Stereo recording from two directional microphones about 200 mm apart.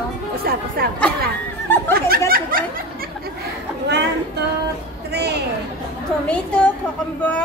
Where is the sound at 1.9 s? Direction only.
50° right (ahead or behind).